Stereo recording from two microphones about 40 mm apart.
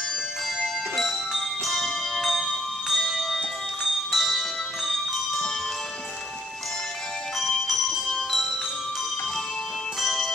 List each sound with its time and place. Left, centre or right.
0.9 s bell: centre
4.1 s music: centre
7.3 s music: centre
9.9 s music: centre